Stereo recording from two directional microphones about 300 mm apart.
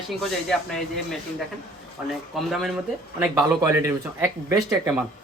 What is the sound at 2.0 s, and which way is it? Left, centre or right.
Speech, centre.